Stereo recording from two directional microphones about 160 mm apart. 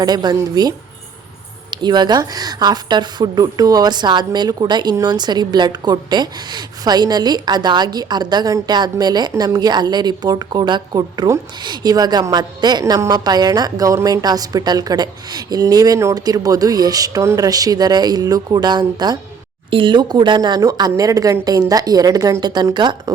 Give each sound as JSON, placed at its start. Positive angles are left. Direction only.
{"t": 0.0, "sound": "a woman's voice", "side_deg": -25}
{"t": 1.7, "sound": "a woman's voice", "side_deg": -30}